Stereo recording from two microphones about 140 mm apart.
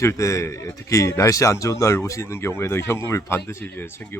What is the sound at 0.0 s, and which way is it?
Speech, 20° left (ahead or behind).